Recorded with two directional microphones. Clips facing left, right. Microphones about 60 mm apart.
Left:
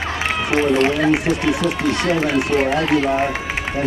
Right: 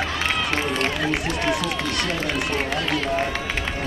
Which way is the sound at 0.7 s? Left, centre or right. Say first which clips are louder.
Left 8 dB; left.